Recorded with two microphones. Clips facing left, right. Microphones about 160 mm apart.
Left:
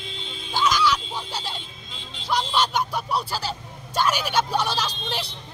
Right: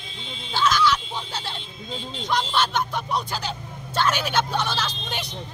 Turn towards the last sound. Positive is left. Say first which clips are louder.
# left 1 dB
turn(degrees=10)  # may be behind; listen again after turning